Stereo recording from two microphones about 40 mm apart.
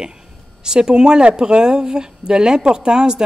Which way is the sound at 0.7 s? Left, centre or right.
Centre.